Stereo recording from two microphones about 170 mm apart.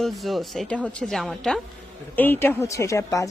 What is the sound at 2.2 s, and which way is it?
A woman's voice, 15° left (ahead or behind).